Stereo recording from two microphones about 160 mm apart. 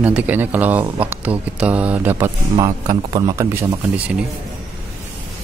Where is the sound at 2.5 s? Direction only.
25° right (ahead or behind).